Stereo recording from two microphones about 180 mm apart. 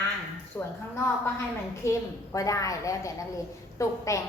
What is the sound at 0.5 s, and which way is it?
Speech, 10° left (ahead or behind).